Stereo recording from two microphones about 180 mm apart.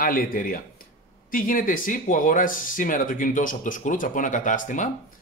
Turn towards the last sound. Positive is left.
turn(degrees=45)  # may be behind; listen again after turning